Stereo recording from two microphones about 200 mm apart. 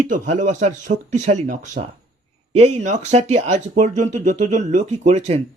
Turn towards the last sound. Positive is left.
turn(degrees=-35)  # may be behind; listen again after turning